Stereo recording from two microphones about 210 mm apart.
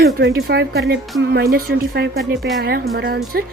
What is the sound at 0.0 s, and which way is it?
Speech, 50° right (ahead or behind).